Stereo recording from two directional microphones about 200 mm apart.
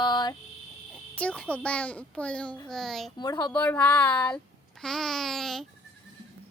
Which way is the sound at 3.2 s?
20° left (ahead or behind).